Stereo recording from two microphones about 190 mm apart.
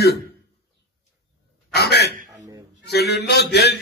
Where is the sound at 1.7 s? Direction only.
60° left (ahead or behind).